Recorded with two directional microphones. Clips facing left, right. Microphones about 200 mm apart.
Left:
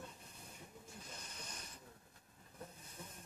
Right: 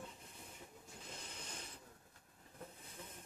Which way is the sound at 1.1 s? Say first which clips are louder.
Right 4 dB; 25° right (ahead or behind).